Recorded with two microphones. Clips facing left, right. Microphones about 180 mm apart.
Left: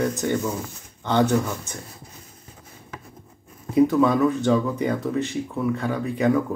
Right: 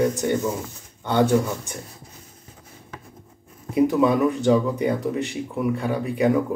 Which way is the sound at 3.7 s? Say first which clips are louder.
Left 1 dB; 20° right (ahead or behind).